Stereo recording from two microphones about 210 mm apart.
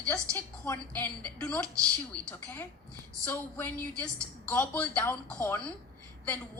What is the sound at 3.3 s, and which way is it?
A woman's voice, 10° left (ahead or behind).